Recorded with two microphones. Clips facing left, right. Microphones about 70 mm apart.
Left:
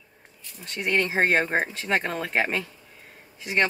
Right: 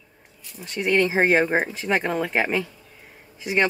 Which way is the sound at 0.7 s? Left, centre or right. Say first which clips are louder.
Right 4 dB; centre.